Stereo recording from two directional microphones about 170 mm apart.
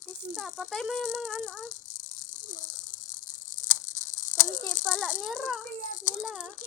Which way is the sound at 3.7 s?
45° left (ahead or behind).